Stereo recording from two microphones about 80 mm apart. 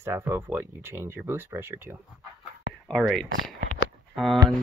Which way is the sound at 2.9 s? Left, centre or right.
Centre.